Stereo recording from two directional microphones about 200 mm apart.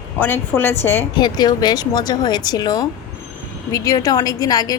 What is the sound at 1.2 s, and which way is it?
A woman's voice, 20° left (ahead or behind).